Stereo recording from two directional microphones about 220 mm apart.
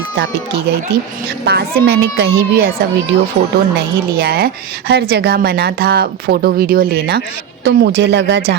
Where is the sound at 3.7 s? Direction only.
45° right (ahead or behind).